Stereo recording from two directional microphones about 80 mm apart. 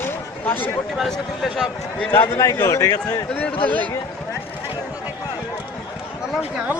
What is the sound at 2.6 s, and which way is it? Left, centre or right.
Speech, left.